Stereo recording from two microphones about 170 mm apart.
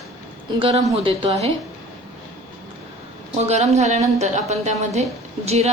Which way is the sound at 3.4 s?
40° right (ahead or behind).